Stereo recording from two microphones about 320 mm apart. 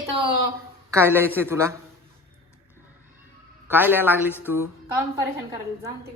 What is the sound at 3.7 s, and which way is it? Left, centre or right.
Speech, centre.